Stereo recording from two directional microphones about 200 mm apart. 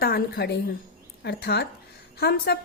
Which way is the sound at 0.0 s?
50° left (ahead or behind).